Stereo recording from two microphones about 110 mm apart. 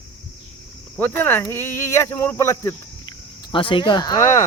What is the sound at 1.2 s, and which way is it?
Speech, 20° left (ahead or behind).